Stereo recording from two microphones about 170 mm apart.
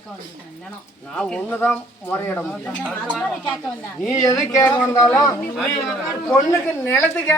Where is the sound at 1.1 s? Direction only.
5° left (ahead or behind).